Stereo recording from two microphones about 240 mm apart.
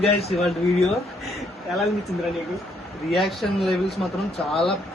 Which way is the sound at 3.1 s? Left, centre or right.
Centre.